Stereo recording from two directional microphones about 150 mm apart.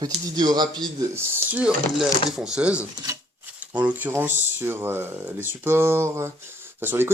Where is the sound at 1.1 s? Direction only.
10° right (ahead or behind).